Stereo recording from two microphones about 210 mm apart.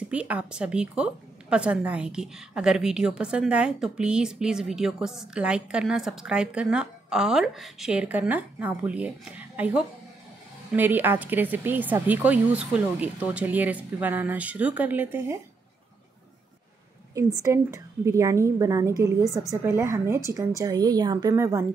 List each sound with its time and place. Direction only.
0.1 s a woman's voice: 5° right (ahead or behind)
17.1 s a woman's voice: 15° right (ahead or behind)